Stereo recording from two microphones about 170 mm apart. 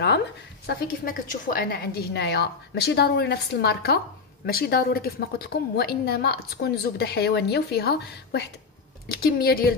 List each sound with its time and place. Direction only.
0.7 s a woman's voice: 60° left (ahead or behind)
9.1 s a woman's voice: 65° left (ahead or behind)